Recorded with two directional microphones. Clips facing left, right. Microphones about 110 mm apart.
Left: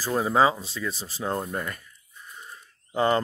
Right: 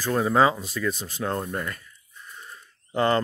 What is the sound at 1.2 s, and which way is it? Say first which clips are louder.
Speech: right 1 dB; 15° left (ahead or behind).